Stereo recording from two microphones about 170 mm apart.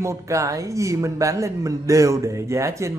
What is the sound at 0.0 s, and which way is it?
A man's voice, 15° right (ahead or behind).